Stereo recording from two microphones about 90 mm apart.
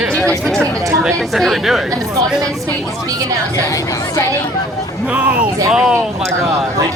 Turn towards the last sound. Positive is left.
turn(degrees=-5)  # may be behind; listen again after turning